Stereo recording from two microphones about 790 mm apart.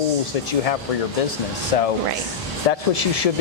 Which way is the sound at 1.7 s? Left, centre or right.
Left.